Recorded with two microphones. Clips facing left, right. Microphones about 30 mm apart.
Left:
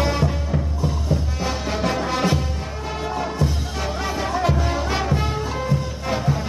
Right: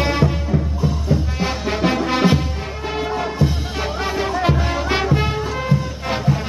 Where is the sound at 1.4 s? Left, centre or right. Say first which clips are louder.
Right 3 dB; right.